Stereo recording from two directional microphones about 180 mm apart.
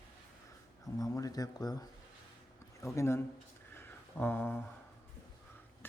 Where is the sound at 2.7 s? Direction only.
15° left (ahead or behind).